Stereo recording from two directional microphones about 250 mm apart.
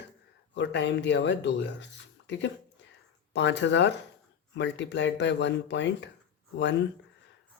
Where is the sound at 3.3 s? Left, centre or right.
Left.